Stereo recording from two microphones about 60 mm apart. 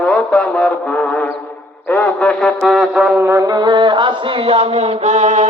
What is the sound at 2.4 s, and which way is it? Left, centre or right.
Music, centre.